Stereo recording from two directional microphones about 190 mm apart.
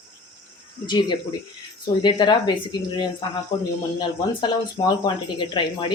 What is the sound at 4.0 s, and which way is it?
Speech, 25° left (ahead or behind).